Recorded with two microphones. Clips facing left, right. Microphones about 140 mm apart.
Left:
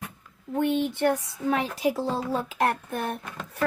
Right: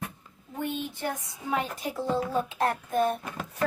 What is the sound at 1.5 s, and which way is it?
Speech, 80° left.